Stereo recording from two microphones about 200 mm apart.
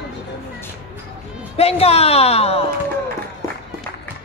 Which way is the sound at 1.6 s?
30° left (ahead or behind).